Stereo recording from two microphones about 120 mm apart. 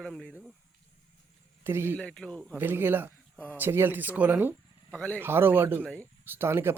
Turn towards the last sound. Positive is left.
turn(degrees=-20)  # may be behind; listen again after turning